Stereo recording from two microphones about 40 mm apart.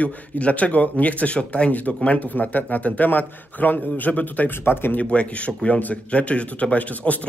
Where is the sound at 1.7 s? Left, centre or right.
Left.